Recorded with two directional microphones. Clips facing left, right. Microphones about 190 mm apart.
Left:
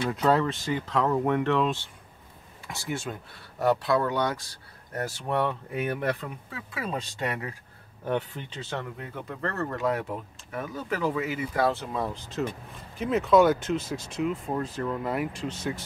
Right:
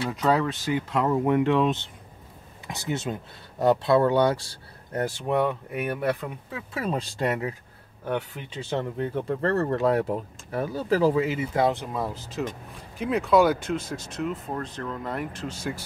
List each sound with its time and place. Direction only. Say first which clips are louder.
0.0 s speech: even; centre (ahead or behind); by 5.1 s 30° right (ahead or behind)
5.2 s speech: right 2 dB; 10° right (ahead or behind)
6.8 s speech: right 4 dB; 35° right (ahead or behind)
8.0 s speech: even; centre (ahead or behind)
8.5 s speech: right 8 dB; 20° right (ahead or behind)
12.0 s speech: even; 5° right (ahead or behind)